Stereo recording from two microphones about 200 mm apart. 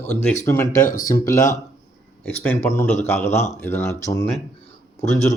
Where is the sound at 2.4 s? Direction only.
10° left (ahead or behind).